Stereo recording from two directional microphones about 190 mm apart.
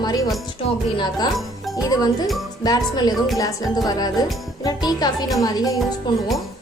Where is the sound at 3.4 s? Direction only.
20° left (ahead or behind).